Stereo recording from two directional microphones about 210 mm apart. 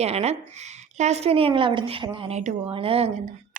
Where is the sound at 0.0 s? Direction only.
30° right (ahead or behind).